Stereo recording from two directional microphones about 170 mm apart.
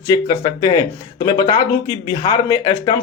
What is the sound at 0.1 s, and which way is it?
Speech, 25° left (ahead or behind).